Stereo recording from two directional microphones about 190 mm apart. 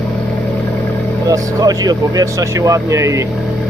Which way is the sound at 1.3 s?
20° right (ahead or behind).